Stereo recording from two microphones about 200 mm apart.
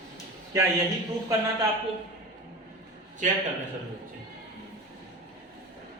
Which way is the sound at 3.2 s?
40° right (ahead or behind).